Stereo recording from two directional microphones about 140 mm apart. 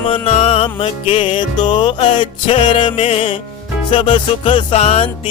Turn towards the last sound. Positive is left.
turn(degrees=45)  # may be behind; listen again after turning